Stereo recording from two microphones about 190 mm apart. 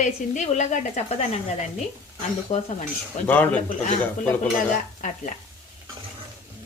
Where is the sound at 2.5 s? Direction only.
40° left (ahead or behind).